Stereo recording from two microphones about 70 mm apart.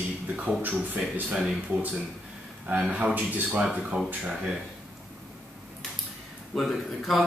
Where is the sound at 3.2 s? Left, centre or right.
Right.